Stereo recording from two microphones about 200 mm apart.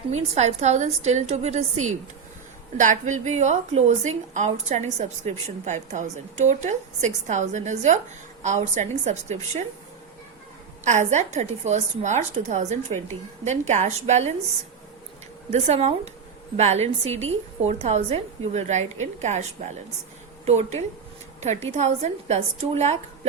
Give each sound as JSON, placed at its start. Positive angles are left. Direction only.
{"t": 0.1, "sound": "a woman's voice", "side_deg": -35}
{"t": 1.7, "sound": "a woman's voice", "side_deg": -90}
{"t": 2.7, "sound": "a woman's voice", "side_deg": -40}
{"t": 10.8, "sound": "a woman's voice", "side_deg": -35}
{"t": 15.5, "sound": "a woman's voice", "side_deg": -35}